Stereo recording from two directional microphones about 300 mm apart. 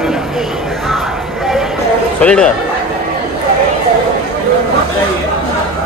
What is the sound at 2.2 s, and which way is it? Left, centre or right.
Speech, centre.